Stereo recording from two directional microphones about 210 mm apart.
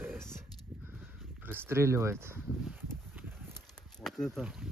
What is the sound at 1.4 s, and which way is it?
Speech, 10° right (ahead or behind).